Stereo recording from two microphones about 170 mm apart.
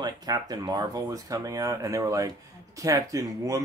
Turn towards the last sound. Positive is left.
turn(degrees=-20)  # may be behind; listen again after turning